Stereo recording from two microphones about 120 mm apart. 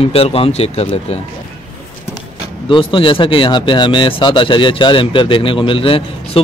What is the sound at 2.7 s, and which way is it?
Speech, 45° left (ahead or behind).